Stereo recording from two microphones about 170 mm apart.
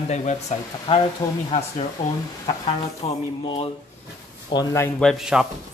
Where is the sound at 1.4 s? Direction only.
40° left (ahead or behind).